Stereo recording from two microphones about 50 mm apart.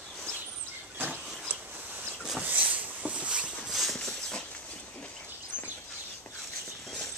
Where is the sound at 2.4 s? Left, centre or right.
Right.